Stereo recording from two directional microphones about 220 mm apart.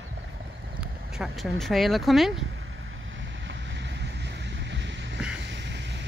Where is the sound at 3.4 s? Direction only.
55° right (ahead or behind).